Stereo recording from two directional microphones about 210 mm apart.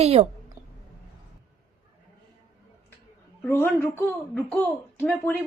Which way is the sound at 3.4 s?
10° left (ahead or behind).